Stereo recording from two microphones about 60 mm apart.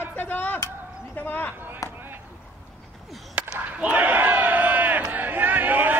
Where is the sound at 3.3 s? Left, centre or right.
Right.